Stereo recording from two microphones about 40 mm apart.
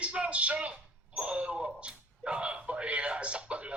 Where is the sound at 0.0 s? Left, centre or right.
Right.